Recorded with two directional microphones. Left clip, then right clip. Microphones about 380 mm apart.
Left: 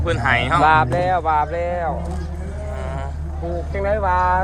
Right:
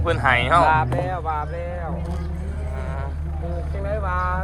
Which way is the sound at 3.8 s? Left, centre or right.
Left.